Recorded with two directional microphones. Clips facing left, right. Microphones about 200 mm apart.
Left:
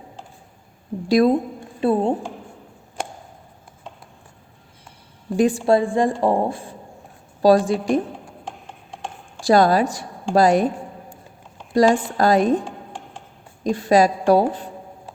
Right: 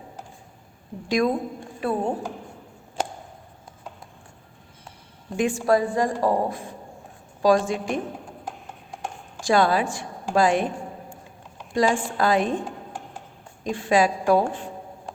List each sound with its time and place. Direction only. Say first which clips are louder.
1.0 s a woman's voice: left 6 dB; 35° left (ahead or behind)
5.4 s a woman's voice: left 4 dB; 35° left (ahead or behind)
9.4 s a woman's voice: left 5 dB; 40° left (ahead or behind)
11.7 s a woman's voice: left 6 dB; 40° left (ahead or behind)
13.7 s a woman's voice: left 4 dB; 40° left (ahead or behind)